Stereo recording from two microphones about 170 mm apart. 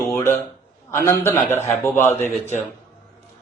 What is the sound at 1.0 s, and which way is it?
A man's voice, 15° left (ahead or behind).